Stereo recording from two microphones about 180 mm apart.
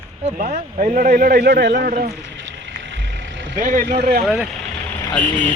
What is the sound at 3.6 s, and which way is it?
Speech, 45° right (ahead or behind).